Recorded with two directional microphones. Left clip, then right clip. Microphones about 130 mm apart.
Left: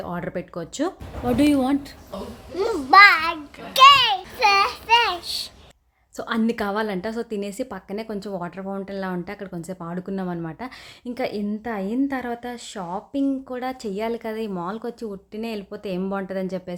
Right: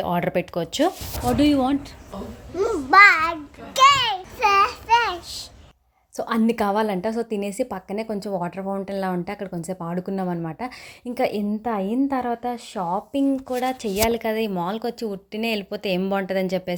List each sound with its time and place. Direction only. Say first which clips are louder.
0.0 s a woman's voice: right 7 dB; 25° right (ahead or behind)
1.2 s a child's voice: even; centre (ahead or behind); by 16.7 s 15° right (ahead or behind)